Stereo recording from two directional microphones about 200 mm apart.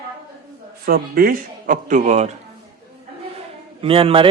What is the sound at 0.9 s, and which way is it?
Speech, 45° right (ahead or behind).